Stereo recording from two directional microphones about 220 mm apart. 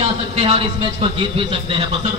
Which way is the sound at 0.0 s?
25° right (ahead or behind).